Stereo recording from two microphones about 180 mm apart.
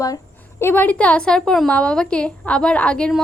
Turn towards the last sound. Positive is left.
turn(degrees=5)  # may be behind; listen again after turning